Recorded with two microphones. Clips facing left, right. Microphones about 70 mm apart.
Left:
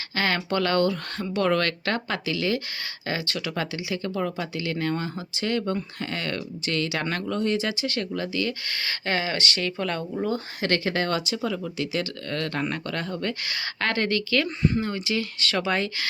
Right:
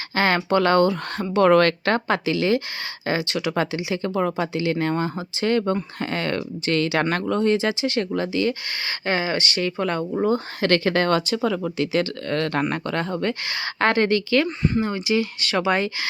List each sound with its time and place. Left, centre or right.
0.1 s speech: right
1.4 s speech: right
8.8 s speech: centre
10.6 s speech: right
12.7 s speech: right
14.4 s speech: centre
15.0 s speech: centre